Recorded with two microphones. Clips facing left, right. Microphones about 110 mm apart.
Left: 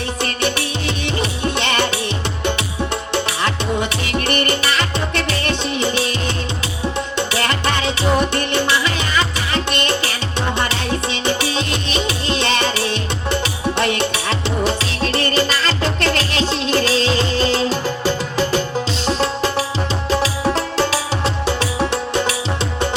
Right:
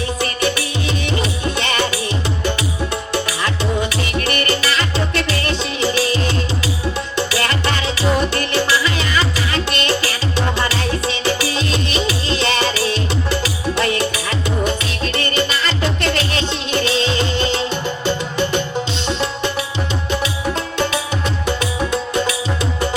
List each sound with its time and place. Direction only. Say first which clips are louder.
1.5 s music: left 1 dB; 25° left (ahead or behind)
5.8 s music: right 5 dB; 25° left (ahead or behind)
11.3 s music: right 1 dB; 25° left (ahead or behind)